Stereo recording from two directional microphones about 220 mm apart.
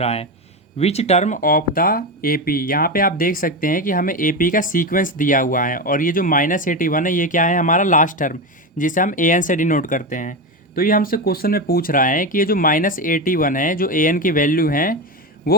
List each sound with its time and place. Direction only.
0.0 s speech: 30° left (ahead or behind)